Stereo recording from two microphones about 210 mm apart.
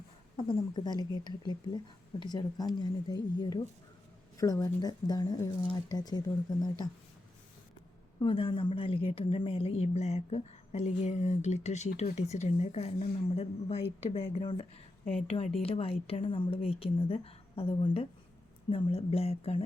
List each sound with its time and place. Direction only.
0.3 s speech: 20° left (ahead or behind)
4.4 s speech: 15° left (ahead or behind)
8.2 s a woman's voice: 25° left (ahead or behind)